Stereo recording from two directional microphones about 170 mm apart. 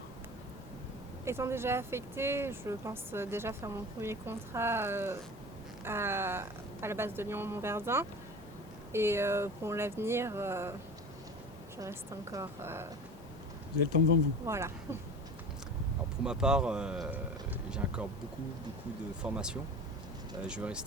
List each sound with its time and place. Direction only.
1.2 s speech: 15° right (ahead or behind)
11.8 s speech: 20° right (ahead or behind)
14.4 s speech: 15° right (ahead or behind)
16.2 s speech: 5° right (ahead or behind)
19.2 s speech: 5° right (ahead or behind)